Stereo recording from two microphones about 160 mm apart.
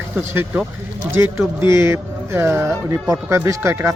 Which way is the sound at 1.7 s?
15° right (ahead or behind).